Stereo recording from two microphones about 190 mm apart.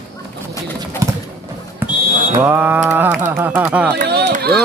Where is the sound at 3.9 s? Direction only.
60° right (ahead or behind).